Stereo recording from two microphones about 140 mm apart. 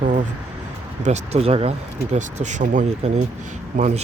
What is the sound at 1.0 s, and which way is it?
Speech, 55° right (ahead or behind).